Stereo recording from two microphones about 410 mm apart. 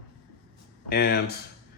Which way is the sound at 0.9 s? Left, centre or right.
Left.